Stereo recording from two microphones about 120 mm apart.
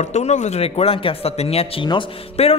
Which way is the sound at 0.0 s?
75° left (ahead or behind).